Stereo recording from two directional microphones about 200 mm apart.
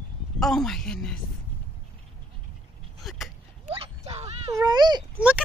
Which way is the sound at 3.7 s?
30° right (ahead or behind).